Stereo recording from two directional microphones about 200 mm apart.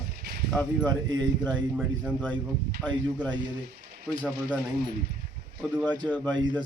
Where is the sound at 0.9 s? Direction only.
20° right (ahead or behind).